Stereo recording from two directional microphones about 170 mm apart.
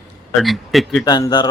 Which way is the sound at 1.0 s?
25° left (ahead or behind).